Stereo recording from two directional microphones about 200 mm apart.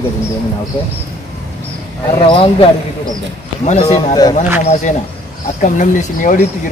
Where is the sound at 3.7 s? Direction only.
30° left (ahead or behind).